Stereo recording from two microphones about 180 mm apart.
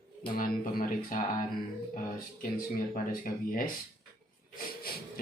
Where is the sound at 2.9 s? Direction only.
50° left (ahead or behind).